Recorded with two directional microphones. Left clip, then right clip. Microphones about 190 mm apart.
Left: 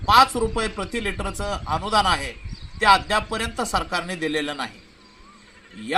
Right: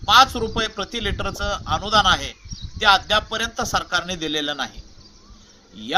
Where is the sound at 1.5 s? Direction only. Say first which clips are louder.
Right 2 dB; 10° right (ahead or behind).